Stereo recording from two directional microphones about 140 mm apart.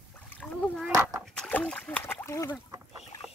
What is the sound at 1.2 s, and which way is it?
Splash, 5° left (ahead or behind).